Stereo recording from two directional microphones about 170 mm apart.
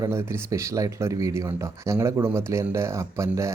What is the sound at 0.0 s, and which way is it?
Speech, 15° right (ahead or behind).